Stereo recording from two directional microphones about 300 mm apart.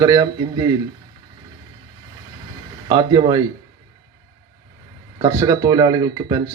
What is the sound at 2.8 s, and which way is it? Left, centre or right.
Speech, centre.